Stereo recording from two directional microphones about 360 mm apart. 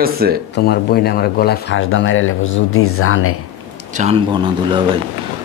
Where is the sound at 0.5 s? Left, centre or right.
Left.